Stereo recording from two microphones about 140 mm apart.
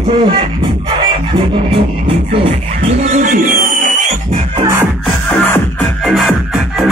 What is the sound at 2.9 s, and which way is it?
Music, 55° right (ahead or behind).